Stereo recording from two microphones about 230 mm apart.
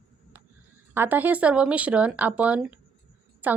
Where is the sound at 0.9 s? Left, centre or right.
Centre.